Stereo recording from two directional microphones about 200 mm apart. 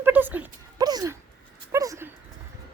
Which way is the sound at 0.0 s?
10° right (ahead or behind).